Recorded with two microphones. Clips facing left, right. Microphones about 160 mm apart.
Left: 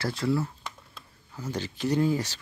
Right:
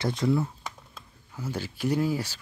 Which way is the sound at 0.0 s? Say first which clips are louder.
Right 2 dB; 20° right (ahead or behind).